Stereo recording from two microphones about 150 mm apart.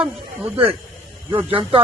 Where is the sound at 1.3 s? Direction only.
10° right (ahead or behind).